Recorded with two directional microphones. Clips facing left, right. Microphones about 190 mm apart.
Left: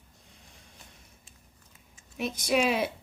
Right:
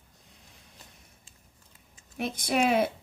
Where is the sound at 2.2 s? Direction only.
55° right (ahead or behind).